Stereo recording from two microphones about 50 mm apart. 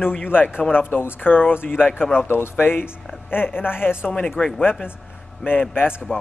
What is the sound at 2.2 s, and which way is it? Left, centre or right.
Speech, left.